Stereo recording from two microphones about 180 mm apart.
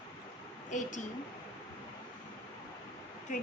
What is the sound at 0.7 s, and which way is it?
Speech, 45° left (ahead or behind).